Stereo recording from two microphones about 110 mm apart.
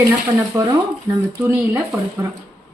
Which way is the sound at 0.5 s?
25° right (ahead or behind).